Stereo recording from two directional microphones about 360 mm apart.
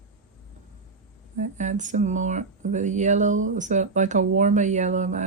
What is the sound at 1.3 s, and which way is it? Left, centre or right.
Speech, centre.